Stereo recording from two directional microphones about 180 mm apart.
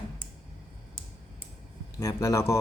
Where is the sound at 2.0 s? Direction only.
15° left (ahead or behind).